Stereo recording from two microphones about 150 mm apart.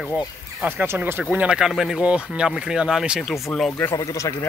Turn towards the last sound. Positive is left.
turn(degrees=20)  # may be behind; listen again after turning